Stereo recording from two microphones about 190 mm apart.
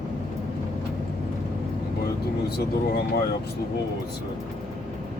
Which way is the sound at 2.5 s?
55° left (ahead or behind).